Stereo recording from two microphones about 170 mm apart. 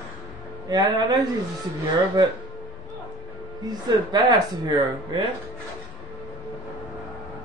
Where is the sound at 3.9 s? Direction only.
25° right (ahead or behind).